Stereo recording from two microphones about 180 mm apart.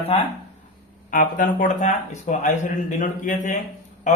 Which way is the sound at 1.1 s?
45° left (ahead or behind).